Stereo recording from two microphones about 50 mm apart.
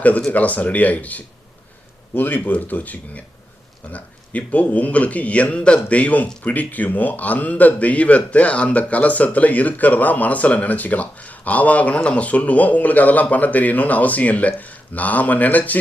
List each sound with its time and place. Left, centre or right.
0.3 s a man's voice: left